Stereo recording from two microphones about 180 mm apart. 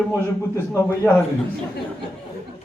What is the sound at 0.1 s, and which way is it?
A man's voice, 15° left (ahead or behind).